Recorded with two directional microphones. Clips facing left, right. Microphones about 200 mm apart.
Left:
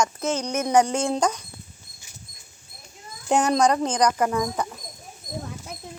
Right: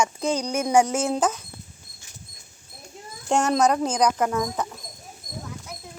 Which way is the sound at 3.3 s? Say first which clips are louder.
Left 1 dB; centre (ahead or behind).